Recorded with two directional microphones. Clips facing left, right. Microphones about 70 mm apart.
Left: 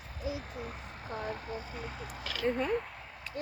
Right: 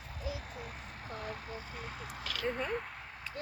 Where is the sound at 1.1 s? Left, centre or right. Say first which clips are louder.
Left 5 dB; left; by 2.2 s centre.